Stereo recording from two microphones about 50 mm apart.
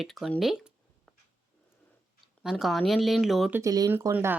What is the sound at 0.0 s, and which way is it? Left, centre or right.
Speech, centre.